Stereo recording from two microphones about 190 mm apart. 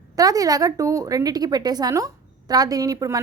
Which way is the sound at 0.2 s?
20° right (ahead or behind).